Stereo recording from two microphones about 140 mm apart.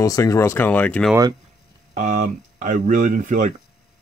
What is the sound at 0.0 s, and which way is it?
Speech, 25° left (ahead or behind).